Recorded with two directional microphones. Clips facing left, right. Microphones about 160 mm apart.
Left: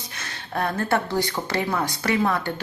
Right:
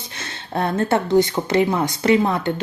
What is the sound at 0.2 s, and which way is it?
Speech, 25° right (ahead or behind).